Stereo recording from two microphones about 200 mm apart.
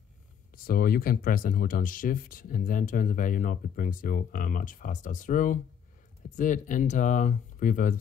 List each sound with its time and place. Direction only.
0.7 s speech: 50° left (ahead or behind)